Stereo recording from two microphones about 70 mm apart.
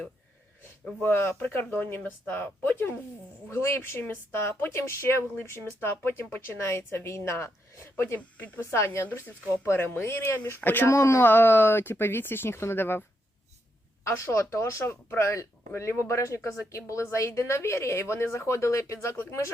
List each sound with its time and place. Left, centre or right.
1.0 s speech: left
8.7 s speech: left
10.8 s speech: left
11.2 s speech: left
14.0 s speech: left